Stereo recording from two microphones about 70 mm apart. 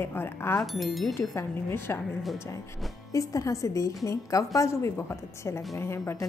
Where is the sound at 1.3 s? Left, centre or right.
Left.